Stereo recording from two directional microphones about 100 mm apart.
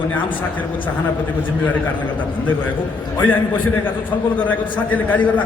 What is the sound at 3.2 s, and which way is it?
A man's voice, 15° left (ahead or behind).